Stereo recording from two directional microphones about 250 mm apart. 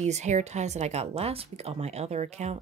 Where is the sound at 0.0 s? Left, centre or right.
Right.